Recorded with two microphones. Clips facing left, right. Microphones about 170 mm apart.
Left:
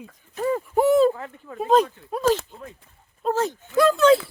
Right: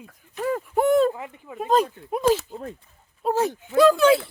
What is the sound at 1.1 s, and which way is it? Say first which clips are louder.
Speech: left 1 dB; 10° right (ahead or behind).